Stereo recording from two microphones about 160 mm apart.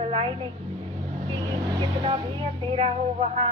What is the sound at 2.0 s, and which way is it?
Speech, 35° right (ahead or behind).